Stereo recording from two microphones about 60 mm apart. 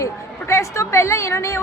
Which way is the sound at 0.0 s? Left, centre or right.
Left.